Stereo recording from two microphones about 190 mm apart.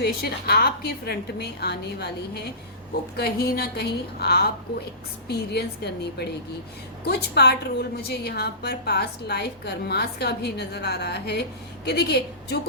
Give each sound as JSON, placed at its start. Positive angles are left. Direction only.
{"t": 0.0, "sound": "a woman's voice", "side_deg": 55}